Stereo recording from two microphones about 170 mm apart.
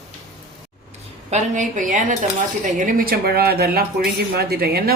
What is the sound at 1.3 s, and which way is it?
A woman's voice, 45° right (ahead or behind).